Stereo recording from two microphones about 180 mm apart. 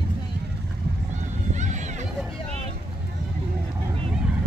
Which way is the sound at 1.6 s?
40° right (ahead or behind).